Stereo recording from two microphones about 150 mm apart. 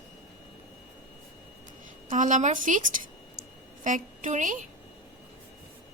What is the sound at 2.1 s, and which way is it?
A woman's voice, 55° right (ahead or behind).